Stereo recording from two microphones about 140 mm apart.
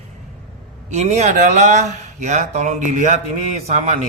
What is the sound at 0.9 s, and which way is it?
Mantra, 55° right (ahead or behind).